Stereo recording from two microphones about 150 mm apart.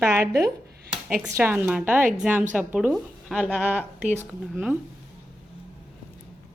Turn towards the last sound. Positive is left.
turn(degrees=-10)  # may be behind; listen again after turning